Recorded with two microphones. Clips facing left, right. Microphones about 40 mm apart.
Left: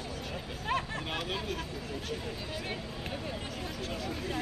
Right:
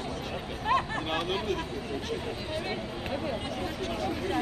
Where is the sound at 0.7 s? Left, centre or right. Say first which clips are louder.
Right 6 dB; right.